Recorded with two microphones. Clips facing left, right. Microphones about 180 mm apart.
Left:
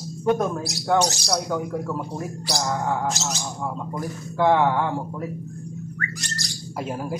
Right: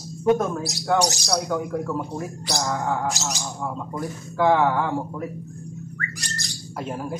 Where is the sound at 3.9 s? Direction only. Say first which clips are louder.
Right 1 dB; centre (ahead or behind).